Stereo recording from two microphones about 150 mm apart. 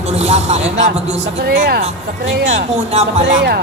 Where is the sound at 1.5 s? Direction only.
90° right.